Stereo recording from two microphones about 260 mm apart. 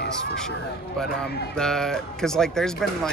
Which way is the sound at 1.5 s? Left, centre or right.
Centre.